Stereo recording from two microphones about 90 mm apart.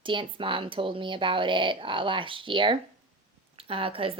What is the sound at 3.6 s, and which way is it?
Speech, 90° right.